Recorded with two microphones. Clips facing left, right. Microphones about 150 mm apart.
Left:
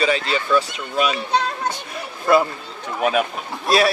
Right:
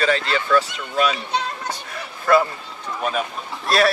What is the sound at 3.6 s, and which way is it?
Speech, 10° left (ahead or behind).